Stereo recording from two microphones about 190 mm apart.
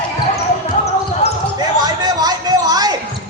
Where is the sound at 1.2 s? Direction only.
35° left (ahead or behind).